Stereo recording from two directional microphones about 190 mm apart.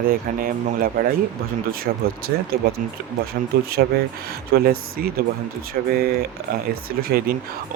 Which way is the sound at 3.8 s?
60° right (ahead or behind).